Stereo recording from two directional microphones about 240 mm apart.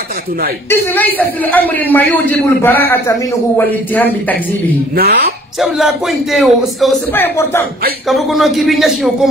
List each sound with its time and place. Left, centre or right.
0.7 s a man's voice: centre
4.9 s speech: right
5.6 s a man's voice: centre
8.1 s a man's voice: centre